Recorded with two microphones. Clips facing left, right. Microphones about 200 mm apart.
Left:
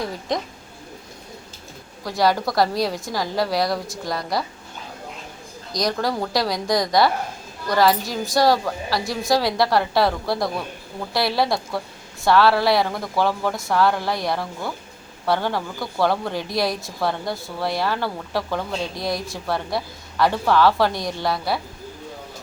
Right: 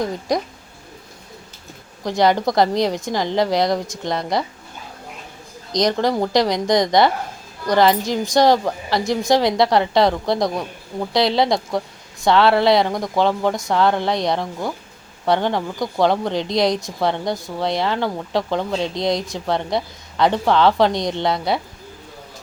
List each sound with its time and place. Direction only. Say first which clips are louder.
2.0 s speech: right 3 dB; 20° right (ahead or behind)
5.7 s speech: right 5 dB; 20° right (ahead or behind)